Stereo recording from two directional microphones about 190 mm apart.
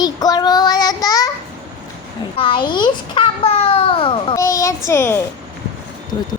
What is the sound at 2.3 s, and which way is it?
A child's voice, 25° left (ahead or behind).